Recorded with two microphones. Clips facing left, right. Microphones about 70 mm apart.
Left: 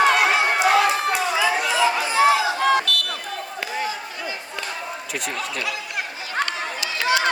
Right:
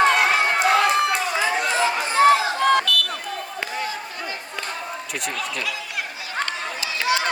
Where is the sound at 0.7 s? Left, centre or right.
Right.